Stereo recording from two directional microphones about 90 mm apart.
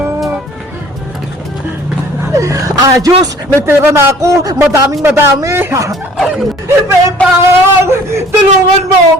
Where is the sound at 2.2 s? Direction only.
35° right (ahead or behind).